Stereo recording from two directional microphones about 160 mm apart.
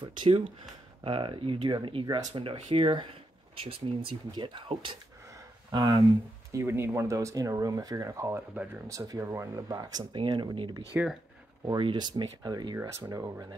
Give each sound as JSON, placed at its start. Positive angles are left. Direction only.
{"t": 0.0, "sound": "speech", "side_deg": -35}
{"t": 10.9, "sound": "speech", "side_deg": -10}
{"t": 11.6, "sound": "speech", "side_deg": -30}